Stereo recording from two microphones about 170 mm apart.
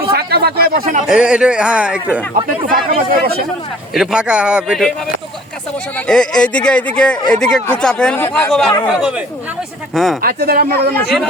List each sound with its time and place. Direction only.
0.1 s speech: 70° right (ahead or behind)
1.0 s speech: 5° right (ahead or behind)
2.7 s speech: 60° right (ahead or behind)
3.9 s speech: 5° right (ahead or behind)
6.1 s speech: 5° left (ahead or behind)
10.2 s speech: 60° right (ahead or behind)